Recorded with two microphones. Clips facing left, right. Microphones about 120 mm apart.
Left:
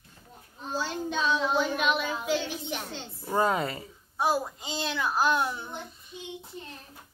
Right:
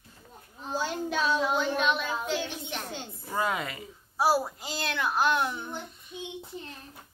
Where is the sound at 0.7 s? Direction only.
5° right (ahead or behind).